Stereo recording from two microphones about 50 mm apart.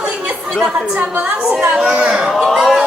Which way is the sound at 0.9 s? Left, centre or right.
Right.